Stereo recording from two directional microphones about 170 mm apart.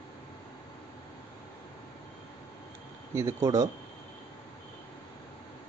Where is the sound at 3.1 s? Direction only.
15° right (ahead or behind).